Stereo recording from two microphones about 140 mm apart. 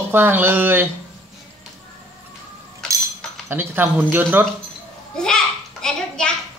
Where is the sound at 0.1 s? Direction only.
15° right (ahead or behind).